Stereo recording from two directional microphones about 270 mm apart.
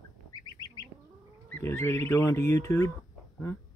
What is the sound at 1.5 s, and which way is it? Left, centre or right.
Speech, centre.